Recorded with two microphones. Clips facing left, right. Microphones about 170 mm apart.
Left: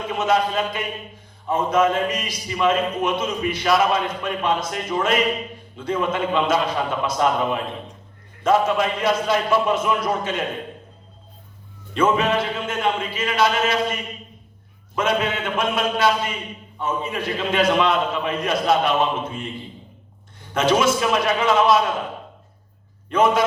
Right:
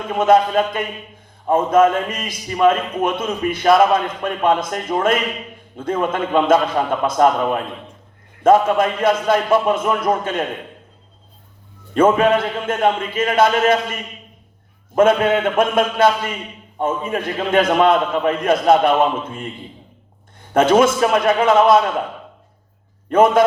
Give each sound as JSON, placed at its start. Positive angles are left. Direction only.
{"t": 0.1, "sound": "a man's voice", "side_deg": -50}
{"t": 11.9, "sound": "a man's voice", "side_deg": -50}
{"t": 14.9, "sound": "a man's voice", "side_deg": -50}
{"t": 20.5, "sound": "a man's voice", "side_deg": -50}
{"t": 23.0, "sound": "a man's voice", "side_deg": -50}